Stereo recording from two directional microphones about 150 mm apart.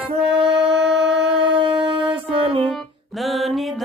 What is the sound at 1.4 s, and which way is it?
Shofar, 35° right (ahead or behind).